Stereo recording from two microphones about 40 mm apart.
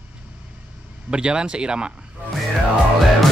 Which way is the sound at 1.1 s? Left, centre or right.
Right.